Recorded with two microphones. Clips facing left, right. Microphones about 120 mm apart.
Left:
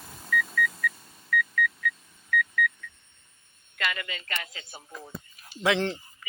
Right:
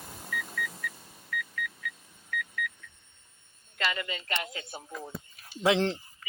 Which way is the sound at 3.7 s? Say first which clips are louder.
Even; 30° right (ahead or behind).